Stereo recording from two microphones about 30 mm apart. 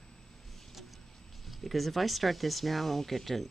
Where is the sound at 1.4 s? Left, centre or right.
Centre.